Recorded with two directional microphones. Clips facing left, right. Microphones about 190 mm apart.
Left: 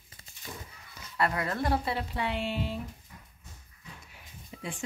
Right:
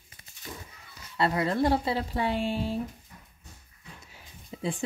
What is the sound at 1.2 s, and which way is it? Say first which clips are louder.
Speech: right 4 dB; 25° right (ahead or behind).